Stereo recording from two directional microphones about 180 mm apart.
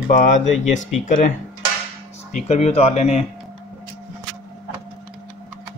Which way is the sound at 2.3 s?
40° left (ahead or behind).